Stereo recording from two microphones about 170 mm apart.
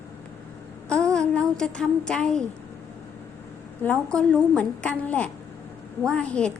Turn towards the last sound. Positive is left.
turn(degrees=5)  # may be behind; listen again after turning